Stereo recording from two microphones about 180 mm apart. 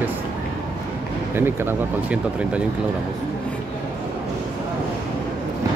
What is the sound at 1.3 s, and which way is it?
Speech, 10° right (ahead or behind).